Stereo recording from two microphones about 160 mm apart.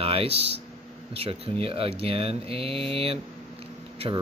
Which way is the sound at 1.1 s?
40° right (ahead or behind).